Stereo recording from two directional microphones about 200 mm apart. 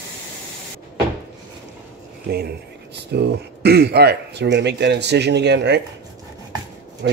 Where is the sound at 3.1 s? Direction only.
55° right (ahead or behind).